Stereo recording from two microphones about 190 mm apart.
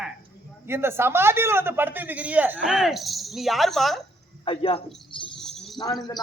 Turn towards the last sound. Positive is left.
turn(degrees=20)  # may be behind; listen again after turning